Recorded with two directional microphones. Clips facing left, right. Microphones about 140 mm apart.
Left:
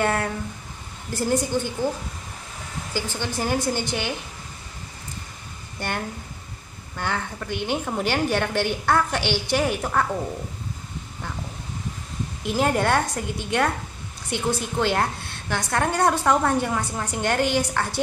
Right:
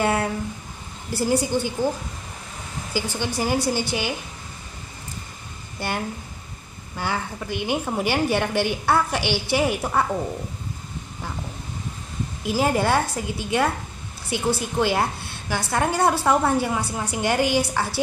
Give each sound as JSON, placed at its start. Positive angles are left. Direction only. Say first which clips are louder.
{"t": 0.0, "sound": "a woman's voice", "louder": "right 1 dB", "side_deg": -5}
{"t": 2.9, "sound": "a woman's voice", "louder": "right 2 dB", "side_deg": -10}
{"t": 5.8, "sound": "a woman's voice", "louder": "right 2 dB", "side_deg": -5}
{"t": 12.4, "sound": "a woman's voice", "louder": "right 1 dB", "side_deg": -5}